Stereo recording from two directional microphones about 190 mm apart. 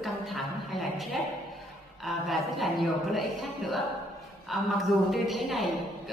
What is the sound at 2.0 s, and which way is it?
A woman's voice, centre (ahead or behind).